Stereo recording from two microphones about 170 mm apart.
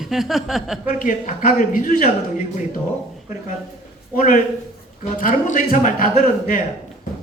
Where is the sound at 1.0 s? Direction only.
50° left (ahead or behind).